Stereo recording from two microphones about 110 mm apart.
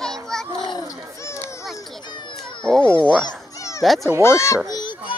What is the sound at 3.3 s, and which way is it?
Children playing, 30° left (ahead or behind).